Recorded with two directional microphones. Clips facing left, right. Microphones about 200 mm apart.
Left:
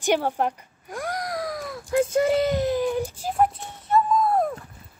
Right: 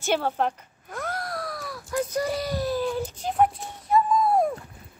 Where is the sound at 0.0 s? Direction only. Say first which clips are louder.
Left 2 dB; 15° left (ahead or behind).